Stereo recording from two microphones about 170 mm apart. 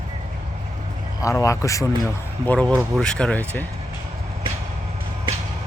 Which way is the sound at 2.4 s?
5° left (ahead or behind).